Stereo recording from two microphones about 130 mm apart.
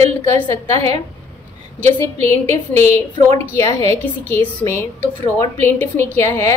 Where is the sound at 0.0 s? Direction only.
55° right (ahead or behind).